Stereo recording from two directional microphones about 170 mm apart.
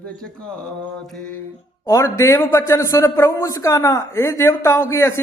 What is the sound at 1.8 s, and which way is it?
A man's voice, 20° left (ahead or behind).